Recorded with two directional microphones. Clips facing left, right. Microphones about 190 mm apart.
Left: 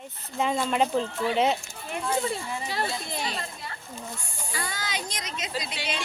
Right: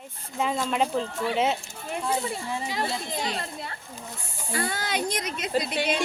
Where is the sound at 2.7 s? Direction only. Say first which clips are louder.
Left 1 dB; 15° right (ahead or behind).